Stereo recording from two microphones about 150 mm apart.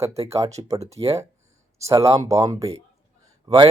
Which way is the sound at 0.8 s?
45° right (ahead or behind).